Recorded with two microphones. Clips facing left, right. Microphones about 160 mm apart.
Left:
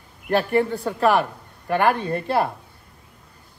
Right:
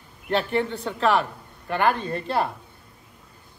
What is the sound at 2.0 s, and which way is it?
Speech, 55° left (ahead or behind).